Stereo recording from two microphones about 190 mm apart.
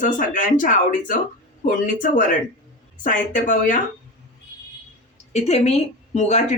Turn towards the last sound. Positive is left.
turn(degrees=35)  # may be behind; listen again after turning